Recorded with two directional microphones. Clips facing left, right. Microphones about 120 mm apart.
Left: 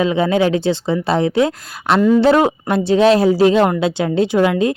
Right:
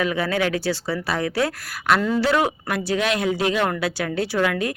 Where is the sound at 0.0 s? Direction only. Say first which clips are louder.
Left 7 dB; 25° left (ahead or behind).